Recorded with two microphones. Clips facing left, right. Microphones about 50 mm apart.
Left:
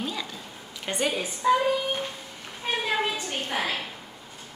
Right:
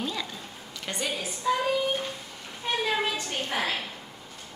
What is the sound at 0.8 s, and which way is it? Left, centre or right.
Speech, left.